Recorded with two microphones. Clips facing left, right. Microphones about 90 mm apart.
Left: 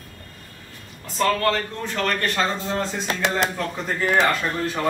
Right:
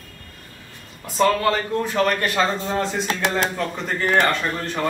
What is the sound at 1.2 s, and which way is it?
A man's voice, 10° right (ahead or behind).